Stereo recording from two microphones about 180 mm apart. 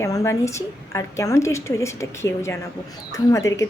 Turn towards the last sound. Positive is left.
turn(degrees=15)  # may be behind; listen again after turning